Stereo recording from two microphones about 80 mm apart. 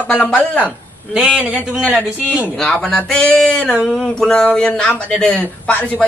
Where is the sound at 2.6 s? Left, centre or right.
Centre.